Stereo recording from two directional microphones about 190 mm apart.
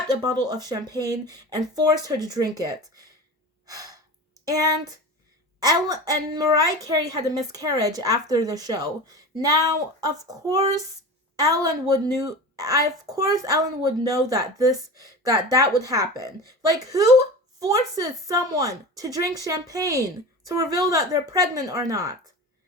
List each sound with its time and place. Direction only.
0.1 s a woman's voice: 20° right (ahead or behind)
3.7 s breathing: 20° right (ahead or behind)
4.4 s a woman's voice: 20° right (ahead or behind)